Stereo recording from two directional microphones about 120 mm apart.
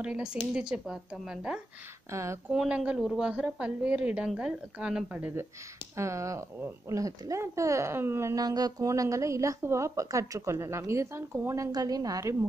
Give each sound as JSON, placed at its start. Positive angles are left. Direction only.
{"t": 0.0, "sound": "a woman's voice", "side_deg": -10}